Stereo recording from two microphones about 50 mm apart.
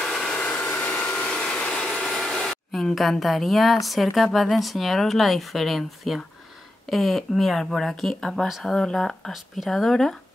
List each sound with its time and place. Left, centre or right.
0.0 s a sound: centre
0.4 s a sound: left
2.9 s a woman's voice: centre
8.5 s speech: centre
8.7 s speech: centre
9.3 s a woman's voice: centre